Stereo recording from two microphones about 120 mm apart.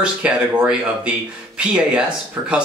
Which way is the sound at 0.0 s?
10° right (ahead or behind).